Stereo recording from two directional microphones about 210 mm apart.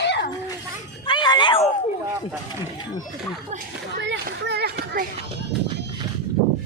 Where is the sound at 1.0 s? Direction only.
20° left (ahead or behind).